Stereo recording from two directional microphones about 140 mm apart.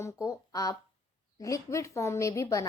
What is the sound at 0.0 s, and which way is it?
A woman's voice, 25° left (ahead or behind).